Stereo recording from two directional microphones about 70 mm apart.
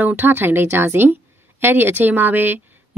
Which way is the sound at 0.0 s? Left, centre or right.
Right.